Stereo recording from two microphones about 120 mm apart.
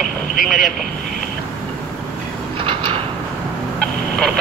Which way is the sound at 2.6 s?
45° right (ahead or behind).